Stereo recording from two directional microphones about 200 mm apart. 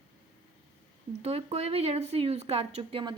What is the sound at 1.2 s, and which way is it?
A woman's voice, 30° right (ahead or behind).